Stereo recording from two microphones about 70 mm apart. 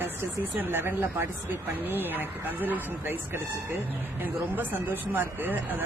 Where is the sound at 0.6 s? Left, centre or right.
Right.